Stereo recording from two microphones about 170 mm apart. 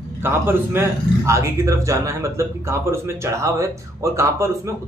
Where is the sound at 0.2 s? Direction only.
15° right (ahead or behind).